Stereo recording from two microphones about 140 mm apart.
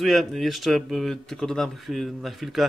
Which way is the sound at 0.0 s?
Centre (ahead or behind).